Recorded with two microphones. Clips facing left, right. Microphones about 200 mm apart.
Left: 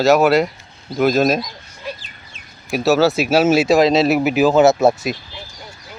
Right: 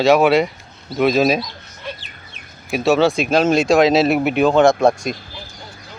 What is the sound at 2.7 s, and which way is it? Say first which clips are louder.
Speech: even; centre (ahead or behind).